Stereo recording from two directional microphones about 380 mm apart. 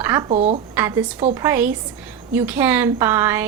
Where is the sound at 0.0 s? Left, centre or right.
Centre.